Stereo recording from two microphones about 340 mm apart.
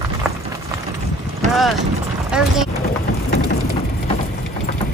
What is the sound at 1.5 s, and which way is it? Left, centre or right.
Speech, centre.